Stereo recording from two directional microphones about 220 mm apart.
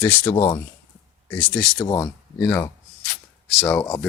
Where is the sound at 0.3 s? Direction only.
25° left (ahead or behind).